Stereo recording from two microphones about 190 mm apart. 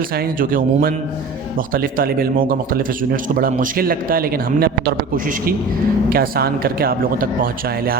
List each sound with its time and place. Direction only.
0.2 s speech: 50° right (ahead or behind)